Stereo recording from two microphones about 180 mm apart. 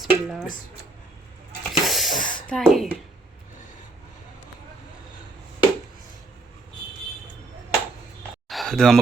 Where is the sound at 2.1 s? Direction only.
50° left (ahead or behind).